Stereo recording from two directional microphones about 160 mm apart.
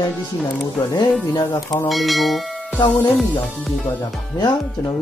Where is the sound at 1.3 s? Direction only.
25° left (ahead or behind).